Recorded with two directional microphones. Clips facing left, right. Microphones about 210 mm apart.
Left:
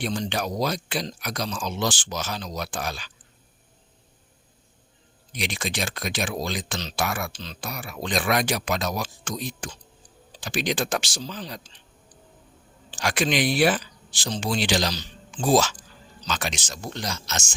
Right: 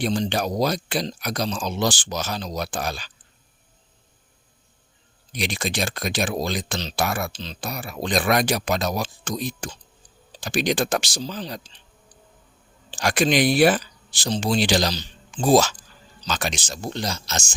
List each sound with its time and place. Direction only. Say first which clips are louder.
0.0 s speech: right 4 dB; 35° right (ahead or behind)
5.3 s speech: right 3 dB; 35° right (ahead or behind)
12.9 s speech: right 4 dB; 40° right (ahead or behind)